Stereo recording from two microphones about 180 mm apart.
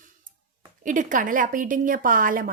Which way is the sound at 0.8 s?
45° right (ahead or behind).